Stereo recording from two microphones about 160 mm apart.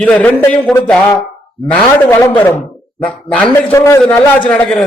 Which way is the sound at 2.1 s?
15° left (ahead or behind).